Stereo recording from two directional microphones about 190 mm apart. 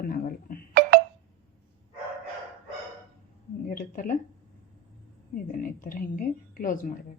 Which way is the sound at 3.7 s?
45° left (ahead or behind).